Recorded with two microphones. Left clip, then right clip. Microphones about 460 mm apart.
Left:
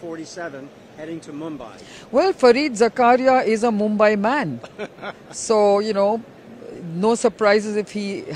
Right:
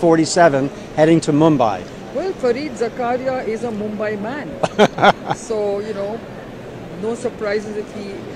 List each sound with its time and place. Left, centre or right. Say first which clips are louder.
0.1 s a man's voice: right 19 dB; right
2.1 s speech: left 5 dB; left
4.6 s a man's voice: right 19 dB; right
5.5 s speech: left 7 dB; left
7.1 s speech: left 5 dB; left